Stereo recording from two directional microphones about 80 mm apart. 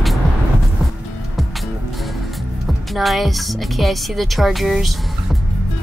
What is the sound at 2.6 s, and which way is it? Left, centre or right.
A woman's voice, centre.